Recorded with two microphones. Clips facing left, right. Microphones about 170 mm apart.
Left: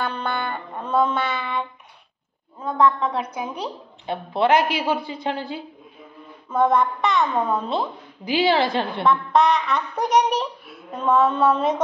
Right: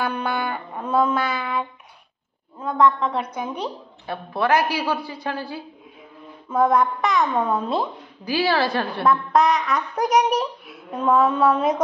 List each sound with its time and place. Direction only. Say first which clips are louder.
0.0 s music: right 2 dB; 10° right (ahead or behind)
2.6 s a woman's voice: right 1 dB; 5° left (ahead or behind)
4.0 s a woman's voice: left 3 dB; 20° left (ahead or behind)
6.5 s music: even; 10° right (ahead or behind)
8.3 s a woman's voice: left 2 dB; 20° left (ahead or behind)
9.0 s music: even; 5° right (ahead or behind)